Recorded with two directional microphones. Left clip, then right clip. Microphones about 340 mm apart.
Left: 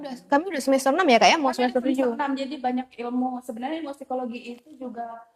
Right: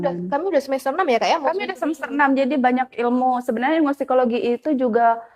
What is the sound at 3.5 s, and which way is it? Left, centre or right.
Speech, right.